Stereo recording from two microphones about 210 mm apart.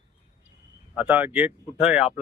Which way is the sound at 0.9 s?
5° right (ahead or behind).